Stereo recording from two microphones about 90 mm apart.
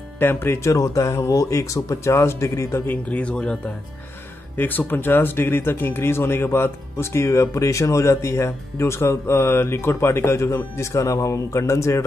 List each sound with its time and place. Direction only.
0.2 s speech: 25° left (ahead or behind)
2.9 s speech: 15° left (ahead or behind); by 12.0 s 35° left (ahead or behind)